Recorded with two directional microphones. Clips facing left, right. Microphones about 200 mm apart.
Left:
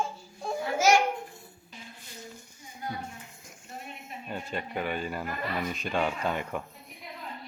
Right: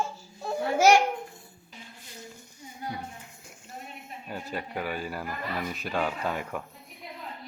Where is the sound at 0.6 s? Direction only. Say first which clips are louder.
Right 4 dB; 65° right (ahead or behind).